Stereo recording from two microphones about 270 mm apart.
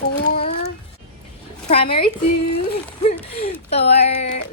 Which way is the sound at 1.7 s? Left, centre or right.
Left.